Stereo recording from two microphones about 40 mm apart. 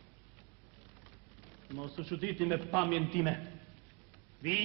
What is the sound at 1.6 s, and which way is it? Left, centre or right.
A man's voice, centre.